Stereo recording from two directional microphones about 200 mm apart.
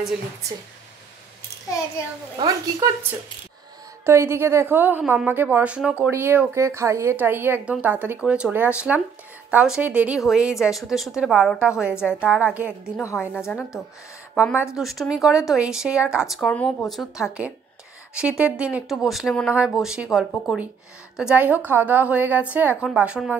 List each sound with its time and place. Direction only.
2.3 s a woman's voice: 20° right (ahead or behind)
13.4 s speech: 5° left (ahead or behind)
14.8 s a woman's voice: centre (ahead or behind)